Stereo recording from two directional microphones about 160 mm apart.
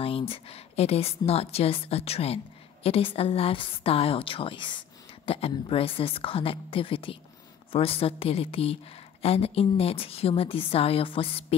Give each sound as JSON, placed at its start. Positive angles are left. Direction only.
{"t": 0.0, "sound": "a woman's voice", "side_deg": 35}